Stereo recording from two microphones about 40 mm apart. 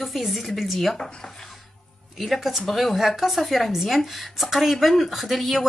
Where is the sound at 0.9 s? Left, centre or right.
Centre.